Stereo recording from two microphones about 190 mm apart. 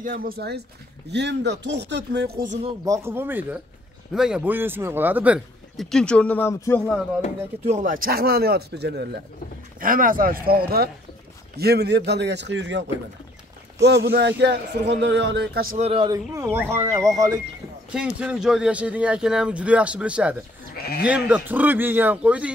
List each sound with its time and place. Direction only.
0.0 s speech: 50° right (ahead or behind)
1.1 s a man's voice: 65° right (ahead or behind)
2.8 s a man's voice: 15° right (ahead or behind); by 7.0 s 10° left (ahead or behind)
7.6 s speech: 40° right (ahead or behind); by 9.2 s 60° right (ahead or behind)
9.8 s a man's voice: 45° right (ahead or behind)
15.8 s speech: 30° right (ahead or behind)
16.3 s a man's voice: 15° right (ahead or behind)
17.9 s a man's voice: 5° right (ahead or behind)